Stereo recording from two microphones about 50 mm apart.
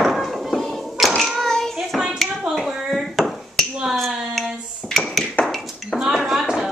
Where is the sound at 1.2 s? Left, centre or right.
Centre.